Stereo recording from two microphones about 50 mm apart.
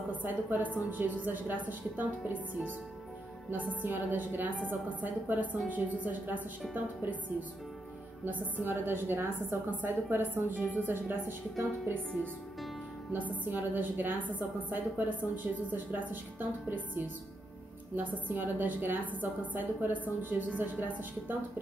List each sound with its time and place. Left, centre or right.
0.1 s a woman's voice: right
8.6 s a woman's voice: right
9.7 s a woman's voice: right
13.4 s a woman's voice: right